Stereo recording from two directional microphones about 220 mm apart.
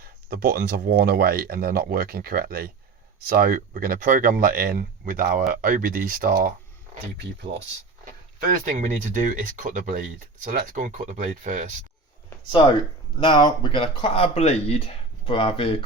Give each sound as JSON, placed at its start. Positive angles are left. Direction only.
{"t": 0.0, "sound": "speech", "side_deg": -45}
{"t": 8.4, "sound": "speech", "side_deg": -35}
{"t": 13.1, "sound": "speech", "side_deg": 20}